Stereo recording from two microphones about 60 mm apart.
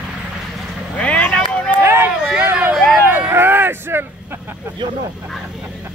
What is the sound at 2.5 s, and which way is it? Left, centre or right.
Vehicle, right.